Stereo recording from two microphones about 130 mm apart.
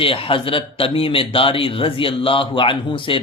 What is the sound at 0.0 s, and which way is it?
A man's voice, 45° left (ahead or behind).